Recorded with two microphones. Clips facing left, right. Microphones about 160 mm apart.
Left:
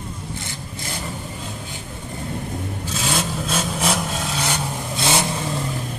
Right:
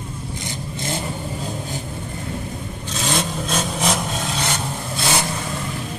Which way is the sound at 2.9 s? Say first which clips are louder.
Right 2 dB; 5° left (ahead or behind).